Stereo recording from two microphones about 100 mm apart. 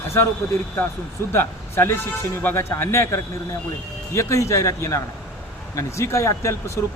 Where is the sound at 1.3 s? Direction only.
25° left (ahead or behind).